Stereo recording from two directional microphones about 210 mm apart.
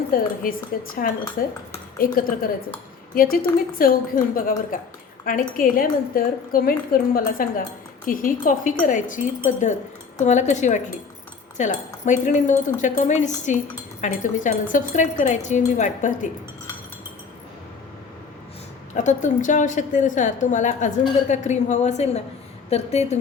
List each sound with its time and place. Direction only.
0.4 s a woman's voice: 45° left (ahead or behind)
18.9 s a woman's voice: 35° left (ahead or behind)